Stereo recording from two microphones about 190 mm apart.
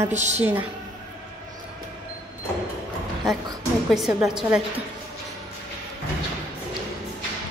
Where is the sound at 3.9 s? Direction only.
5° right (ahead or behind).